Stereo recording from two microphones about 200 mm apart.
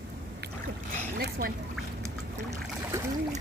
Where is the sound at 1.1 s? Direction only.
50° right (ahead or behind).